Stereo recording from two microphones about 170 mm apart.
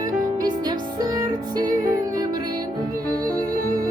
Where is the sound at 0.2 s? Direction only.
25° right (ahead or behind).